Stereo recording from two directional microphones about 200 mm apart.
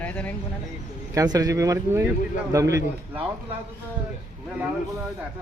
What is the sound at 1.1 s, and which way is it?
Speech, 20° right (ahead or behind).